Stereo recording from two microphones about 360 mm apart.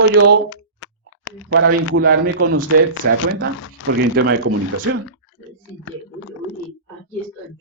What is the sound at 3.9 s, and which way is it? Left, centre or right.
Speech, right.